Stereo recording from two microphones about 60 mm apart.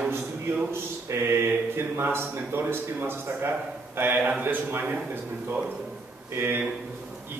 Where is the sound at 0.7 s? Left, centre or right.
Right.